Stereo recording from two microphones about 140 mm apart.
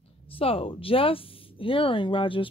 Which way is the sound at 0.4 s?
40° left (ahead or behind).